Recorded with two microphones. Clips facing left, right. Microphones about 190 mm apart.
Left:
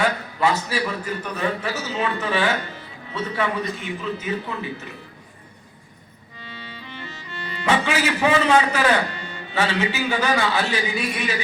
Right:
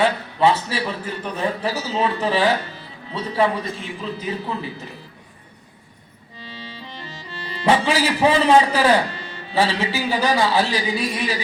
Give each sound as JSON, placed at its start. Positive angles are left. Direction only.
{"t": 0.0, "sound": "a man's voice", "side_deg": -30}
{"t": 6.4, "sound": "a man's voice", "side_deg": -35}